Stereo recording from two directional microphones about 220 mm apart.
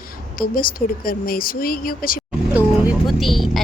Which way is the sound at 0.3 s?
40° left (ahead or behind).